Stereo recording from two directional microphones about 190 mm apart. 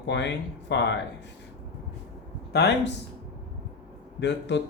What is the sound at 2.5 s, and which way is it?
Speech, 60° left (ahead or behind).